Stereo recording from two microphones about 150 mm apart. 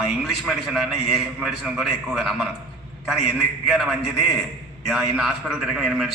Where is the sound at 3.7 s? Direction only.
Centre (ahead or behind).